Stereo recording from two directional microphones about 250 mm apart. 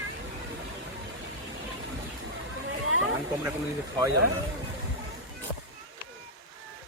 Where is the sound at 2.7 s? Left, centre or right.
Right.